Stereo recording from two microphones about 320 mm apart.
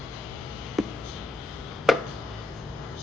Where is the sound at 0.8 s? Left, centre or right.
Centre.